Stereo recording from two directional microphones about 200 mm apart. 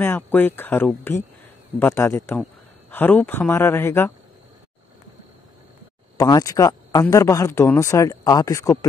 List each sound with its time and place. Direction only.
0.0 s speech: 10° left (ahead or behind)
6.1 s speech: 20° left (ahead or behind)